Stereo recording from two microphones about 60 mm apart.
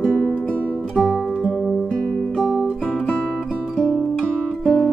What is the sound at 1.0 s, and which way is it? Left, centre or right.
Music, centre.